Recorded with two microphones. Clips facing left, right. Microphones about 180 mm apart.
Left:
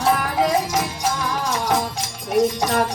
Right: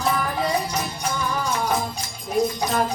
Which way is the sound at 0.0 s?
85° left.